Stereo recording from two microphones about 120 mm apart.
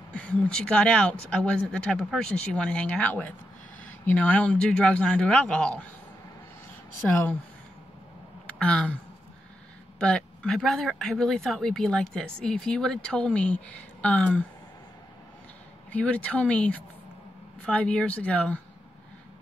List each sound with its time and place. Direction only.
0.1 s speech: 10° left (ahead or behind)
7.1 s speech: 15° left (ahead or behind)
8.5 s speech: 10° left (ahead or behind)
9.9 s speech: 10° left (ahead or behind)
15.9 s speech: 10° left (ahead or behind)